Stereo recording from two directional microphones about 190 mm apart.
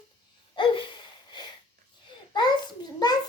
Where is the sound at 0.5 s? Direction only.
25° left (ahead or behind).